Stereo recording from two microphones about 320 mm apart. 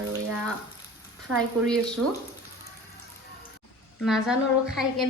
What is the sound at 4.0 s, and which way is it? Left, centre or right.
A woman's voice, centre.